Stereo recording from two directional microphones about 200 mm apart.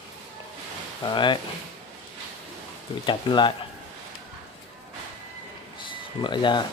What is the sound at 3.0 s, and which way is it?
Speech, 25° left (ahead or behind).